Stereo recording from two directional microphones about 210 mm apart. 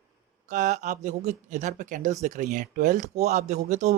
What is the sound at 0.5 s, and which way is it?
Speech, 35° right (ahead or behind).